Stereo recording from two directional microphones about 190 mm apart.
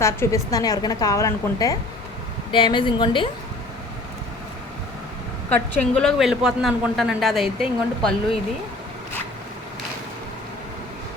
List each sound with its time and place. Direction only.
0.0 s a woman's voice: 15° left (ahead or behind)
5.5 s a woman's voice: 5° left (ahead or behind)